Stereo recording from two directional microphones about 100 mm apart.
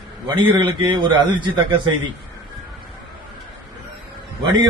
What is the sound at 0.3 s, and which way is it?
A man's voice, 50° right (ahead or behind).